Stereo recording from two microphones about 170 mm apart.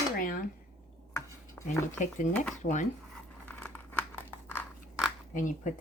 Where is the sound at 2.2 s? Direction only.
50° left (ahead or behind).